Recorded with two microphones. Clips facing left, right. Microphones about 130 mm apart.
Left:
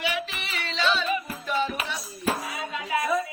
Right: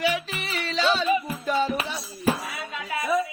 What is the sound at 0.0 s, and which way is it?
Music, 40° right (ahead or behind).